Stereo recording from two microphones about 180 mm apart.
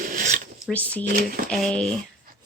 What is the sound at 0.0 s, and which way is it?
Zipper, 50° right (ahead or behind).